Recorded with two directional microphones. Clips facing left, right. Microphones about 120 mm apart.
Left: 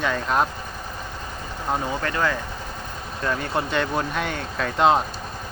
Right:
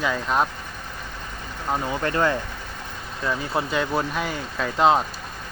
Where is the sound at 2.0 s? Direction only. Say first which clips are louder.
Right 4 dB; 25° right (ahead or behind).